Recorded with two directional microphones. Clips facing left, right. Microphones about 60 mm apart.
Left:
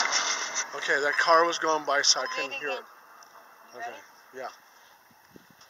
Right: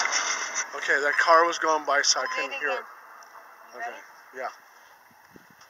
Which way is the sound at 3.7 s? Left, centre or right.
Centre.